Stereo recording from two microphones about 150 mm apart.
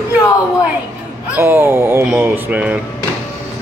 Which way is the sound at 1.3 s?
15° right (ahead or behind).